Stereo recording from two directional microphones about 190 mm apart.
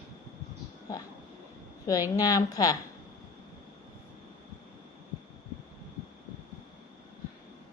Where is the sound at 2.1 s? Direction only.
20° left (ahead or behind).